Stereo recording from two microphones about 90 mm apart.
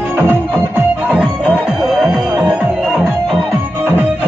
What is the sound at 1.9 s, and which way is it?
Music, 5° right (ahead or behind).